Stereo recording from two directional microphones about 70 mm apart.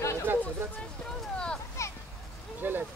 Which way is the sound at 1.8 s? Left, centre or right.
Left.